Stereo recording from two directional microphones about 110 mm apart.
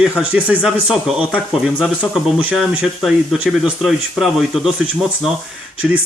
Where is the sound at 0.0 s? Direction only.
10° right (ahead or behind).